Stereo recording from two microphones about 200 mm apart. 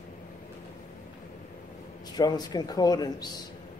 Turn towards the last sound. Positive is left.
turn(degrees=20)  # may be behind; listen again after turning